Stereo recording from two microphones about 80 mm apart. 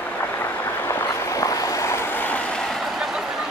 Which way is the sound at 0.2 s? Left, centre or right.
Left.